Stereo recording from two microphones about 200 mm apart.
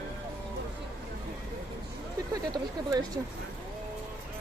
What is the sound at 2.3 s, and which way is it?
Speech, 20° right (ahead or behind).